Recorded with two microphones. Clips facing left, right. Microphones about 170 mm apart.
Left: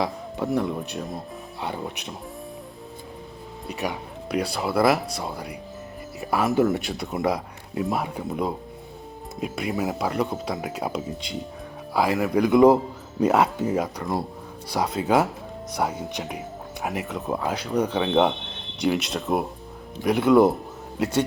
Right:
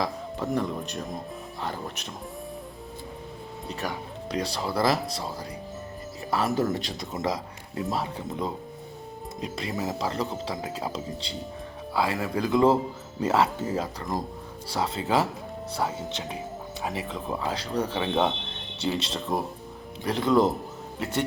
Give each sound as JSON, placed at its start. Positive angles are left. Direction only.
{"t": 0.0, "sound": "speech", "side_deg": 10}
{"t": 3.7, "sound": "speech", "side_deg": 10}